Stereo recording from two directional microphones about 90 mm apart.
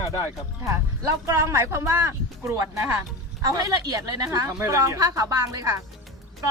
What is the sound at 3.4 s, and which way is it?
A woman's voice, 45° right (ahead or behind).